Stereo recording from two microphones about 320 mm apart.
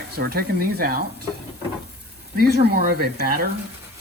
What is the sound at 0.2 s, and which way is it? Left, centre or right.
Speech, right.